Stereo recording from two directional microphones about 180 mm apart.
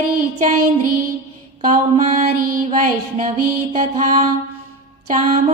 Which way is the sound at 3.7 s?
40° right (ahead or behind).